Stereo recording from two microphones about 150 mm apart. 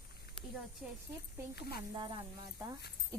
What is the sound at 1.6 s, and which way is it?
Speech, 90° left.